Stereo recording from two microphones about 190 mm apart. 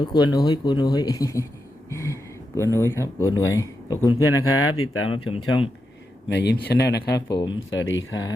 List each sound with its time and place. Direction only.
0.0 s speech: 20° left (ahead or behind)
1.9 s a sound: 15° left (ahead or behind)
2.7 s speech: 15° left (ahead or behind)
6.2 s speech: 65° left (ahead or behind)
7.3 s speech: 25° left (ahead or behind)
7.7 s speech: 85° left